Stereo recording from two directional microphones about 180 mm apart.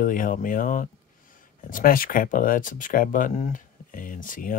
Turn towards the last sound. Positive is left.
turn(degrees=50)  # may be behind; listen again after turning